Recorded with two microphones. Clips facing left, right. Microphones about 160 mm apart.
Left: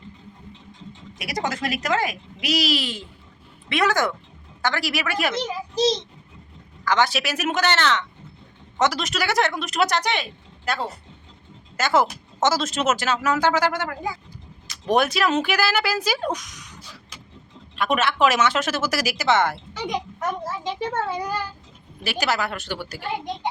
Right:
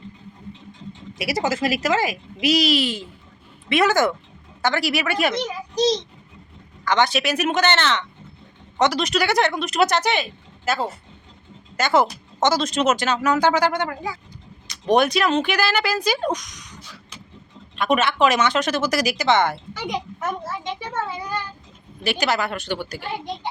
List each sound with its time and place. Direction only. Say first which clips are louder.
1.2 s speech: right 5 dB; 5° right (ahead or behind)
6.8 s speech: right 2 dB; centre (ahead or behind)
17.7 s speech: right 2 dB; centre (ahead or behind)
20.7 s a child's voice: left 3 dB; 45° left (ahead or behind)
22.0 s speech: right 2 dB; 5° left (ahead or behind)